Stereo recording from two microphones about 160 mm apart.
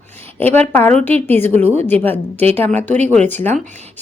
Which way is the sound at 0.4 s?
40° right (ahead or behind).